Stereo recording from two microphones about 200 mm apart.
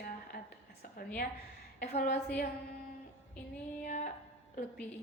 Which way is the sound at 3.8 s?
40° left (ahead or behind).